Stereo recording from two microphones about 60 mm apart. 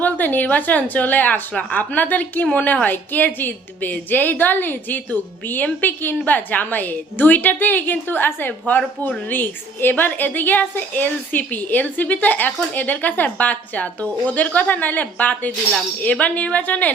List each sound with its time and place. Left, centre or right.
0.0 s speech: left